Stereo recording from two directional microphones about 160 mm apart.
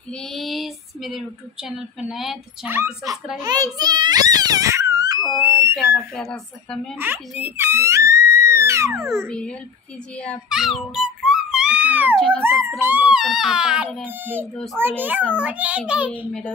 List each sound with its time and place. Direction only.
0.1 s female singing: centre (ahead or behind)
3.3 s a child's voice: 25° right (ahead or behind)
5.8 s a woman's voice: 5° left (ahead or behind)
7.0 s speech: 10° right (ahead or behind)
9.3 s a child's voice: 5° left (ahead or behind)
10.5 s music: centre (ahead or behind)
12.2 s a woman's voice: 5° left (ahead or behind)
12.4 s speech: 20° right (ahead or behind)
14.5 s a woman's voice: 5° left (ahead or behind)
14.8 s speech: 10° right (ahead or behind)
16.1 s a child's voice: 10° left (ahead or behind)